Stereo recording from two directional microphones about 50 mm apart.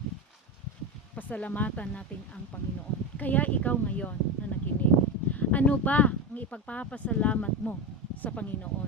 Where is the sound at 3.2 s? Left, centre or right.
Left.